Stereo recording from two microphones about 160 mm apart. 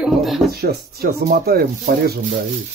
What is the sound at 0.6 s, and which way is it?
Chopping, 75° right (ahead or behind).